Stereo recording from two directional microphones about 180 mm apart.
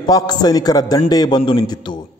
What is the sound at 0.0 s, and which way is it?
A man's voice, 20° left (ahead or behind).